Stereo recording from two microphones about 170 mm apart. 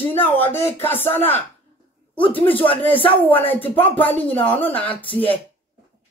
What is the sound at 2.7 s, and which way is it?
Speech, 30° left (ahead or behind).